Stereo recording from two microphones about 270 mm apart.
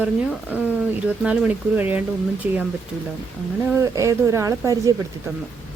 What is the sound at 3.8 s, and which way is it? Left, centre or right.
Speech, centre.